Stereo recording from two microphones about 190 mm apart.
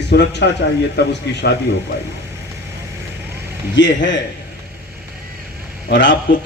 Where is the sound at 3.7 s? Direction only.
70° left (ahead or behind).